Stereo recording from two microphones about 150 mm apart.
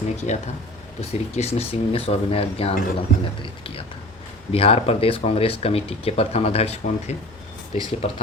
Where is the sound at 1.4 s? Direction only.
40° left (ahead or behind).